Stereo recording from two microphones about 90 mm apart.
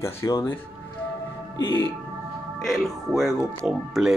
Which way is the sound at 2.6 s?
Centre (ahead or behind).